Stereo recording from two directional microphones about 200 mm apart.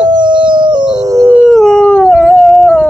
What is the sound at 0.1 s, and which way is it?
Howl, 25° right (ahead or behind).